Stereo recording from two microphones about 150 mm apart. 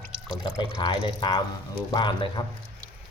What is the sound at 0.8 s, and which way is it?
Speech, 30° left (ahead or behind).